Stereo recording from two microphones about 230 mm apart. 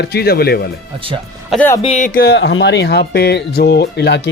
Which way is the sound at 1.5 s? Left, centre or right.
Centre.